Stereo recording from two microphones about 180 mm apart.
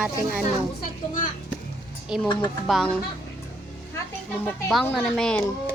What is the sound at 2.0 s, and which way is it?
Speech, 5° right (ahead or behind).